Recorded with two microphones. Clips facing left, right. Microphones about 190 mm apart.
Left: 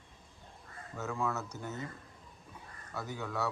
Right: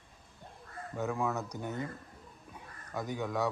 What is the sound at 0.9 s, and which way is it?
Speech, 15° right (ahead or behind).